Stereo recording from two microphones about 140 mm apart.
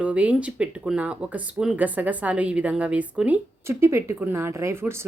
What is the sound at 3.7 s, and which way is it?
Speech, 20° right (ahead or behind).